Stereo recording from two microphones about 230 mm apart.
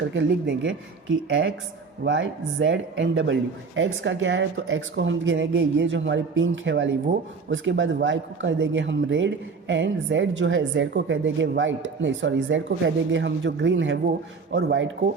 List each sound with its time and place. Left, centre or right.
0.1 s speech: right